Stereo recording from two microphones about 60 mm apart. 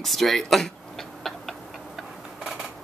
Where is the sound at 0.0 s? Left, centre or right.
Centre.